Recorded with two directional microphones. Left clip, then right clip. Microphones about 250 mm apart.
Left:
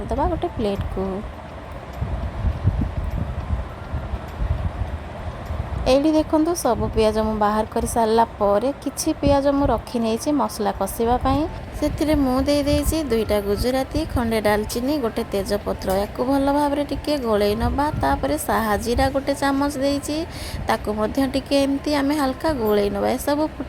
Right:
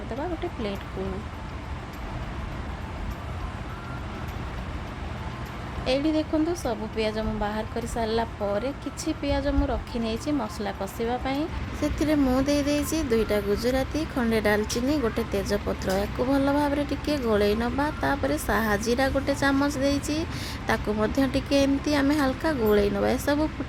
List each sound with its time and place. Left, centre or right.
0.2 s a woman's voice: left
5.8 s a woman's voice: left